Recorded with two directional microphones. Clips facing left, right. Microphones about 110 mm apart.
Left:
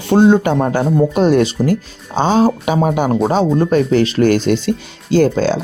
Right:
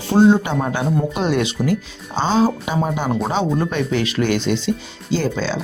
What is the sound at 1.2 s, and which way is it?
Speech, 40° left (ahead or behind).